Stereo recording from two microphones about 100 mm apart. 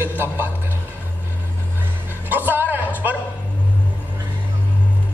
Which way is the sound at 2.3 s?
20° right (ahead or behind).